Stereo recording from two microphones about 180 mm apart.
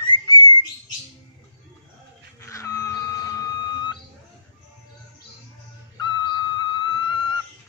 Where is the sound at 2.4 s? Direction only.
15° left (ahead or behind).